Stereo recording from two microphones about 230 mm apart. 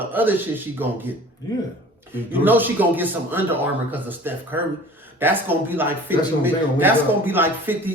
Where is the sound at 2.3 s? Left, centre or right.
Centre.